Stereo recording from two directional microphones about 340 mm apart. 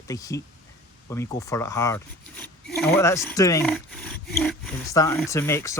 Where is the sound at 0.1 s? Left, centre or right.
Centre.